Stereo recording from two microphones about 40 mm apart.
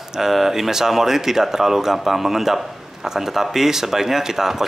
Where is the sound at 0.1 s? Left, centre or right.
Centre.